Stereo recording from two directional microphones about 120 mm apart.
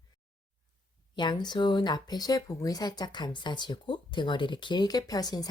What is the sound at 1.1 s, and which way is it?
Speech, 40° left (ahead or behind).